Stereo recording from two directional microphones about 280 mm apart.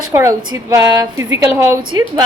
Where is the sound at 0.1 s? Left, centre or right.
Centre.